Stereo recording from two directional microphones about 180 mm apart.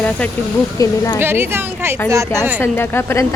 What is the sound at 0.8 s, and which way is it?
Speech, 20° left (ahead or behind).